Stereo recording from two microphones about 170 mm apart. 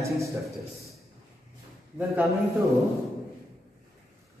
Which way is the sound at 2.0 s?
15° right (ahead or behind).